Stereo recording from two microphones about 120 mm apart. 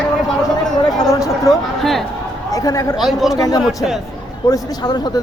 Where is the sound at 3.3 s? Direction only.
30° left (ahead or behind).